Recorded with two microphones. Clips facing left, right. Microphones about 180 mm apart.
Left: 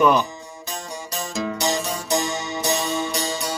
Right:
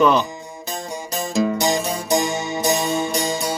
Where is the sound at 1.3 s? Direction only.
35° right (ahead or behind).